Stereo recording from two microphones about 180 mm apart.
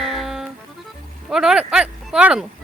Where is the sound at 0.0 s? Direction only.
Centre (ahead or behind).